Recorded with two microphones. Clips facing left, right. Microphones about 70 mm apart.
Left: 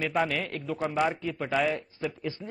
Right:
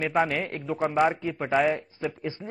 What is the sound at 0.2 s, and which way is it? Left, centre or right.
A man's voice, right.